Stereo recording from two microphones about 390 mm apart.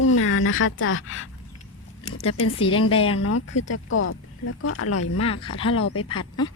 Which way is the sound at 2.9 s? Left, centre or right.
Centre.